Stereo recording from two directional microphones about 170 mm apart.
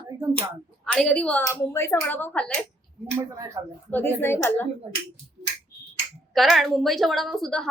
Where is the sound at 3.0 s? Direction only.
15° right (ahead or behind).